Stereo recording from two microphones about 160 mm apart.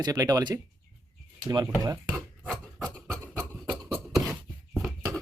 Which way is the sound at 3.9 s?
Centre (ahead or behind).